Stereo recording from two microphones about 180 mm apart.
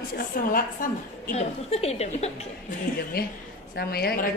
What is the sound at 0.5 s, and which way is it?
Speech, 55° left (ahead or behind).